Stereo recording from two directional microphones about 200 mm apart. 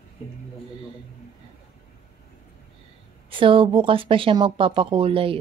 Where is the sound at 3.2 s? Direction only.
25° right (ahead or behind).